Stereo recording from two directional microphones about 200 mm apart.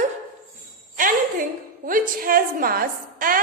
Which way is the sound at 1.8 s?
45° right (ahead or behind).